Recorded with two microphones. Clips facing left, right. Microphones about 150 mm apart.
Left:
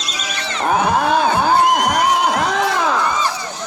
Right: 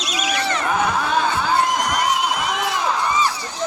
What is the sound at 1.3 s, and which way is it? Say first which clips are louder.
Crowd: left 5 dB; 60° left (ahead or behind).